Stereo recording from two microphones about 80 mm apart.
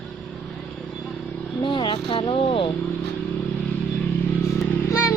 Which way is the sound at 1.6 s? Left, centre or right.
Left.